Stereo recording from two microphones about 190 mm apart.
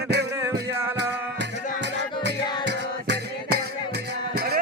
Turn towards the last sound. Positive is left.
turn(degrees=-55)  # may be behind; listen again after turning